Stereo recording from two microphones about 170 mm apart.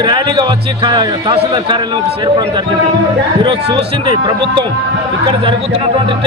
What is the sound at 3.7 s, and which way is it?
Speech, 25° right (ahead or behind).